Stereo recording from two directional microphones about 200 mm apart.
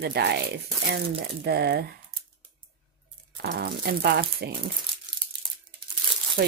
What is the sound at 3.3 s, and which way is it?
Speech, 50° right (ahead or behind).